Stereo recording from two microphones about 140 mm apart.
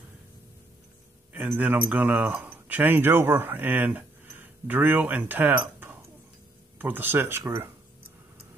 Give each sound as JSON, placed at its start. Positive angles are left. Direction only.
{"t": 1.6, "sound": "speech", "side_deg": -10}